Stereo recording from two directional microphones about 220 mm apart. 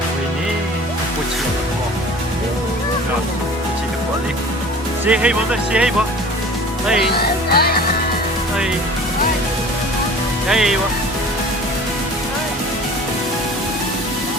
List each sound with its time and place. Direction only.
5.0 s speech: 5° right (ahead or behind)
7.1 s music: 45° left (ahead or behind)
10.5 s speech: centre (ahead or behind)